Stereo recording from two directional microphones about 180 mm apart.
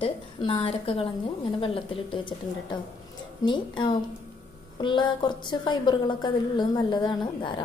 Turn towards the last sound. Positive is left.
turn(degrees=25)  # may be behind; listen again after turning